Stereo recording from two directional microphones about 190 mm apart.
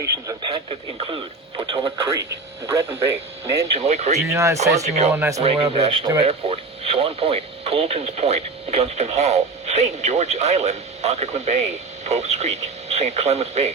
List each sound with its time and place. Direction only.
0.0 s speech: 15° right (ahead or behind)
0.5 s speech: 30° right (ahead or behind)
3.7 s speech: 35° right (ahead or behind)
4.3 s speech: 15° right (ahead or behind)
4.8 s speech: 35° right (ahead or behind)
5.1 s speech: 15° right (ahead or behind)
5.4 s speech: 30° right (ahead or behind)
6.2 s speech: 35° right (ahead or behind)